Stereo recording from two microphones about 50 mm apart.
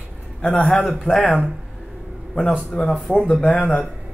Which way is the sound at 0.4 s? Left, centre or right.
Left.